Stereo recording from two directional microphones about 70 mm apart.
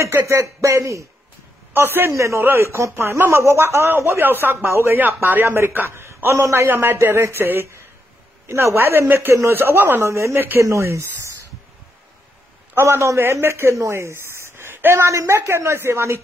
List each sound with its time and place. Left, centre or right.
0.0 s speech: right
1.7 s a man's voice: right
2.1 s speech: right
2.4 s speech: right
5.9 s a sound: right
6.4 s speech: right
12.7 s speech: right
15.0 s speech: right